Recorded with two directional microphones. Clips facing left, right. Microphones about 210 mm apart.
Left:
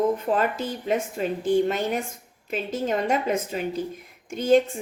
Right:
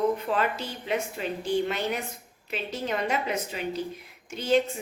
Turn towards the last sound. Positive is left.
turn(degrees=50)  # may be behind; listen again after turning